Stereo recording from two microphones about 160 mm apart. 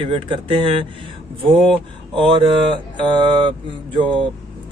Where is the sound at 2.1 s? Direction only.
35° right (ahead or behind).